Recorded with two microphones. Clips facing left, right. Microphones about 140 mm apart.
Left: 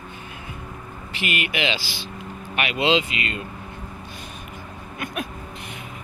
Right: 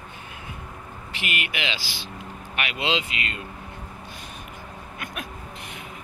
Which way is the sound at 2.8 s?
75° left (ahead or behind).